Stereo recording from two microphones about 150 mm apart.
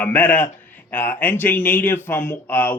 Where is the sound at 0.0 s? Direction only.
10° left (ahead or behind).